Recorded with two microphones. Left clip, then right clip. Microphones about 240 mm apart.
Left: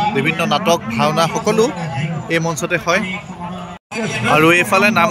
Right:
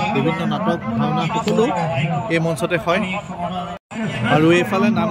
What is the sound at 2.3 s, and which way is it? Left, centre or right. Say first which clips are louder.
Speech: left 4 dB; centre.